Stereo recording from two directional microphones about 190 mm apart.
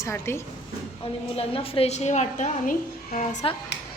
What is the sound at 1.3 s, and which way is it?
A woman's voice, 30° left (ahead or behind).